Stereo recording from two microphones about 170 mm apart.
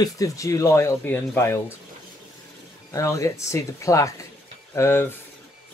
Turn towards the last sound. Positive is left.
turn(degrees=15)  # may be behind; listen again after turning